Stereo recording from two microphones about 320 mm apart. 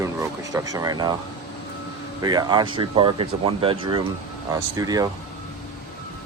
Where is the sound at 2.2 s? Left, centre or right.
Centre.